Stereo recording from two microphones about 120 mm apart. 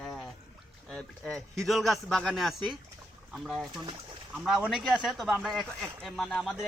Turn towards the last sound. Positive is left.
turn(degrees=5)  # may be behind; listen again after turning